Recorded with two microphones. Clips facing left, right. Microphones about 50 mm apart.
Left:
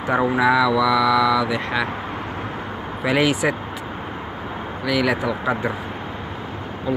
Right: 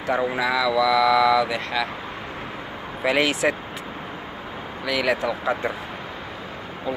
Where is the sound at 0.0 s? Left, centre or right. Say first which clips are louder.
Left 3 dB; left.